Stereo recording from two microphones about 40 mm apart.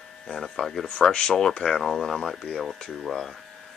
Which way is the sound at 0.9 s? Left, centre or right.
Left.